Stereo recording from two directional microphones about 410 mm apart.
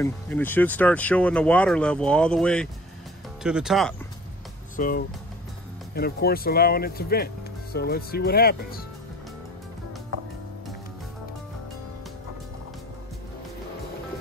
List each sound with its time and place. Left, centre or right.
0.0 s speech: centre
4.7 s speech: left